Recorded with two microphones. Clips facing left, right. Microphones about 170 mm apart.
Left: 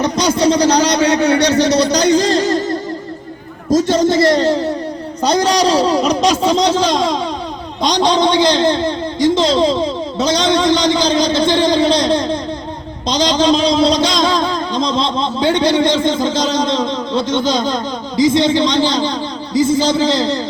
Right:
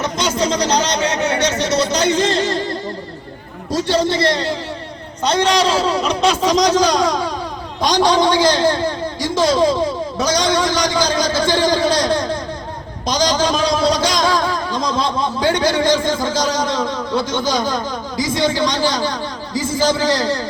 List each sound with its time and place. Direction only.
0.0 s a sound: 35° left (ahead or behind)
0.9 s speech: 35° left (ahead or behind)
3.7 s a man's voice: 45° left (ahead or behind); by 20.4 s 20° left (ahead or behind)